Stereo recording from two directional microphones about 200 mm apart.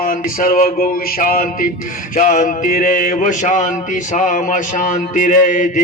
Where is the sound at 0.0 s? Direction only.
45° left (ahead or behind).